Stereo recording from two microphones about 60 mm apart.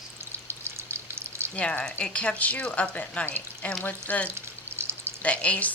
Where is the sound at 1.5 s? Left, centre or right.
Left.